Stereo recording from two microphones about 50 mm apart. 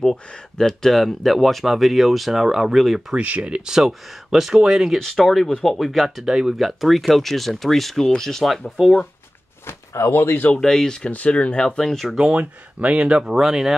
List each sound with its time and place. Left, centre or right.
0.0 s speech: centre
3.2 s speech: right; by 4.9 s centre
4.9 s speech: centre
6.2 s speech: centre
6.6 s speech: centre
8.6 s speech: centre
9.7 s speech: left
10.6 s speech: centre
11.1 s speech: left
12.0 s speech: centre
12.3 s speech: right
13.2 s speech: centre